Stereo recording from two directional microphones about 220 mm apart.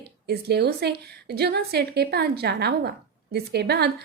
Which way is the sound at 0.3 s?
45° right (ahead or behind).